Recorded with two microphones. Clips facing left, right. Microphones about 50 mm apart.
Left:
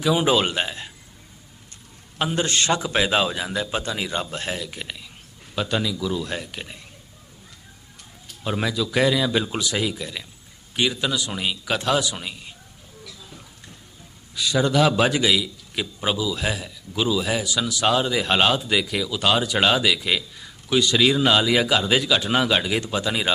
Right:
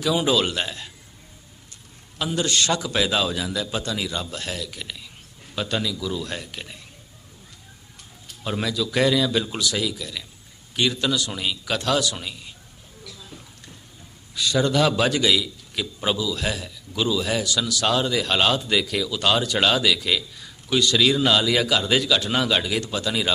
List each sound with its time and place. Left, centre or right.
0.0 s a man's voice: left
2.1 s a man's voice: left
5.5 s speech: centre
8.4 s a man's voice: centre
10.8 s speech: centre
14.3 s speech: centre